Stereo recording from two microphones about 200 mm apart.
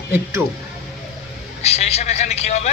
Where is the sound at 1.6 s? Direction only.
30° left (ahead or behind).